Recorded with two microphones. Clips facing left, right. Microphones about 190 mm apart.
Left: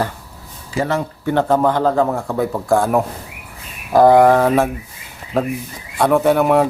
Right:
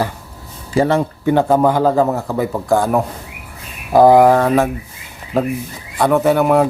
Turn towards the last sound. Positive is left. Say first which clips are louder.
# right 1 dB
turn(degrees=0)  # may be behind; listen again after turning